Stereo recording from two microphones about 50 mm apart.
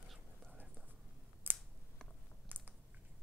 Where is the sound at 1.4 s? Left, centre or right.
Right.